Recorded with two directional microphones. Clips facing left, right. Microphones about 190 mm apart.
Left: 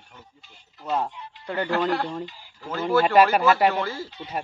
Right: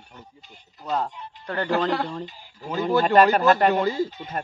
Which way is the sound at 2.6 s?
15° right (ahead or behind).